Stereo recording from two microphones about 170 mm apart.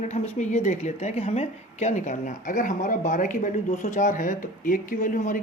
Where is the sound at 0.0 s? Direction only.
40° left (ahead or behind).